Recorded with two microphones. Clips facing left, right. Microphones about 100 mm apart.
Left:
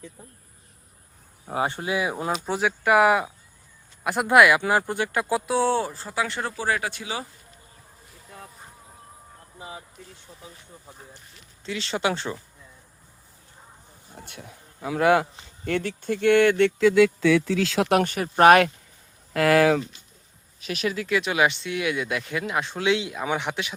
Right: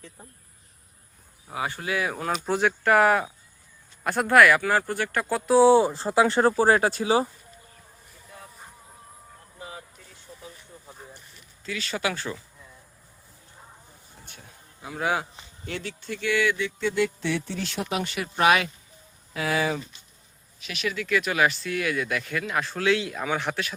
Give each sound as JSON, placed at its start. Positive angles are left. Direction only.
{"t": 1.6, "sound": "speech", "side_deg": 25}
{"t": 2.3, "sound": "speech", "side_deg": 0}
{"t": 5.5, "sound": "speech", "side_deg": -10}
{"t": 5.9, "sound": "speech", "side_deg": -30}
{"t": 9.6, "sound": "vehicle", "side_deg": 20}
{"t": 11.6, "sound": "speech", "side_deg": 25}
{"t": 14.2, "sound": "speech", "side_deg": 65}
{"t": 17.4, "sound": "speech", "side_deg": 90}
{"t": 18.0, "sound": "speech", "side_deg": 45}
{"t": 19.3, "sound": "speech", "side_deg": 65}
{"t": 20.6, "sound": "speech", "side_deg": 40}